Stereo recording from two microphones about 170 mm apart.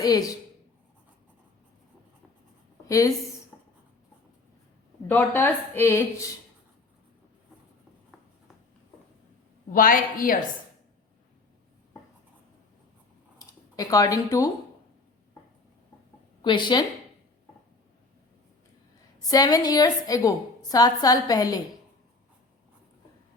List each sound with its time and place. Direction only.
0.0 s a woman's voice: 20° left (ahead or behind)
5.0 s a woman's voice: 10° left (ahead or behind)
9.7 s a woman's voice: 55° left (ahead or behind)
13.7 s a woman's voice: 20° left (ahead or behind)
16.4 s a woman's voice: 25° left (ahead or behind)
19.2 s a woman's voice: 20° left (ahead or behind)